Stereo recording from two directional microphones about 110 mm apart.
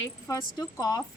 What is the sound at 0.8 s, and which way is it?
Speech, 35° left (ahead or behind).